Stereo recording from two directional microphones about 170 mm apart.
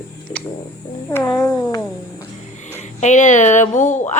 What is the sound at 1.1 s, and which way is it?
Speech, 15° left (ahead or behind).